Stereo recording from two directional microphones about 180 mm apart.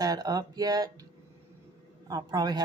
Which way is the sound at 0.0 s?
20° right (ahead or behind).